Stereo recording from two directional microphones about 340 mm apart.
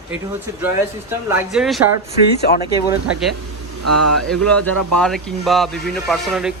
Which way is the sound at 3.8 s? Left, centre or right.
Right.